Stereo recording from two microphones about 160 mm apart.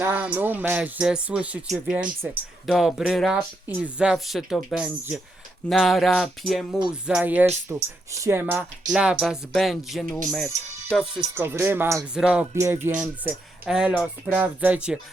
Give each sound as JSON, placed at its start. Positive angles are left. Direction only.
{"t": 0.0, "sound": "speech", "side_deg": -10}
{"t": 7.1, "sound": "speech", "side_deg": -10}
{"t": 11.3, "sound": "speech", "side_deg": -15}